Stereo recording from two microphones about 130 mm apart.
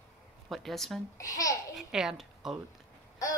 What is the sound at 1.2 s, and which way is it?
Speech, 25° left (ahead or behind).